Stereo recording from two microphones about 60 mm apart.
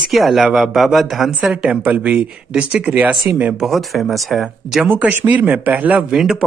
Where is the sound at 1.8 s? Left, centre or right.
Right.